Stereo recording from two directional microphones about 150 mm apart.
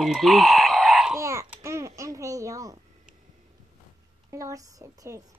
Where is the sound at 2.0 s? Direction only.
20° right (ahead or behind).